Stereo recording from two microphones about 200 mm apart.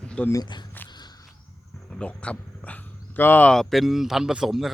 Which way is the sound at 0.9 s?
20° left (ahead or behind).